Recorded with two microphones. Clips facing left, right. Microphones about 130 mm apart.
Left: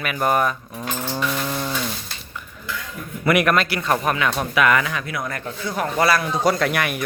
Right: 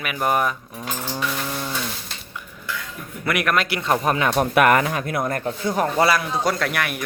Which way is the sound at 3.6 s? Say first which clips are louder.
Even; 20° right (ahead or behind).